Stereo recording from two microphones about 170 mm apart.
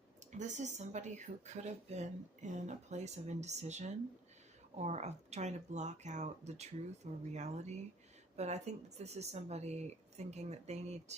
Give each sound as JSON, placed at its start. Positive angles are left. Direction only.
{"t": 0.3, "sound": "speech", "side_deg": -45}